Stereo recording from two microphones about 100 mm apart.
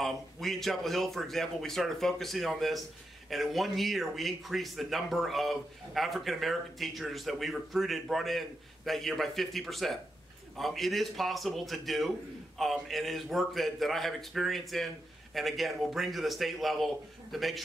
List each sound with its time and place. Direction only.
0.0 s a man's voice: 5° left (ahead or behind)